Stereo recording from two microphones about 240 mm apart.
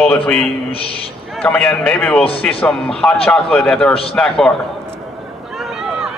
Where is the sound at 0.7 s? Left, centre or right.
Left.